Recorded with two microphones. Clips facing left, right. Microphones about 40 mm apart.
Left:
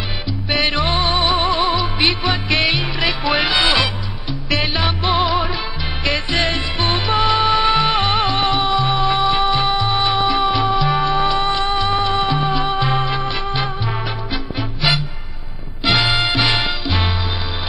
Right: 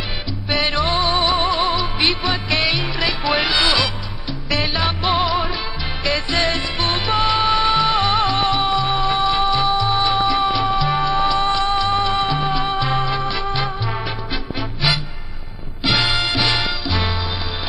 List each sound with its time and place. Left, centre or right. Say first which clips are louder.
0.5 s music: left 1 dB; centre
1.1 s music: left 1 dB; centre
6.8 s music: left 2 dB; centre
9.4 s music: even; left
10.2 s music: left 1 dB; centre
11.9 s music: left 1 dB; centre
16.0 s music: left 2 dB; centre